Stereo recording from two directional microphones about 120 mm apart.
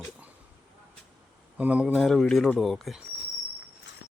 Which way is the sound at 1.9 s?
Centre (ahead or behind).